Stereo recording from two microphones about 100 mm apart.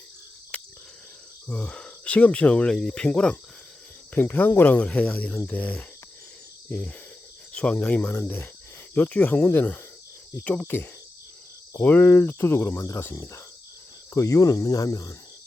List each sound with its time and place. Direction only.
1.5 s speech: 10° left (ahead or behind); by 13.4 s 30° left (ahead or behind)
14.1 s cricket: 30° left (ahead or behind)